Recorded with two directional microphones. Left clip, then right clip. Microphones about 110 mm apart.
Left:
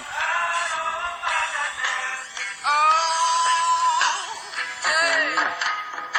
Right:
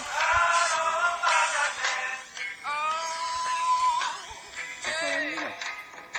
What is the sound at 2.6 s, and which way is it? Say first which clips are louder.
Synthetic singing: left 11 dB; 90° left.